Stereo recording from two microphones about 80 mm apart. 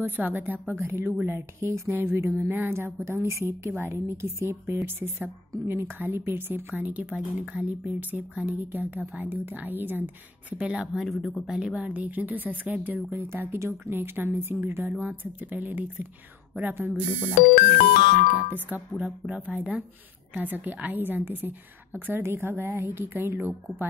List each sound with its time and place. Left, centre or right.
0.0 s a woman's voice: right
10.6 s speech: centre
11.1 s speech: centre; by 17.0 s right
17.0 s speech: centre
18.9 s speech: centre